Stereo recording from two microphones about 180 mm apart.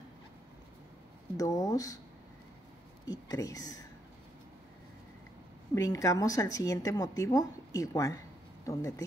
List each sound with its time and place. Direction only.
1.3 s speech: 20° left (ahead or behind)
3.1 s a woman's voice: 20° left (ahead or behind)
5.8 s a woman's voice: 20° left (ahead or behind)